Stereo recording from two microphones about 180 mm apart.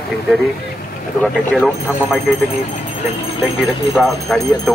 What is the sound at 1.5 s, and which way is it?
Speech, centre (ahead or behind).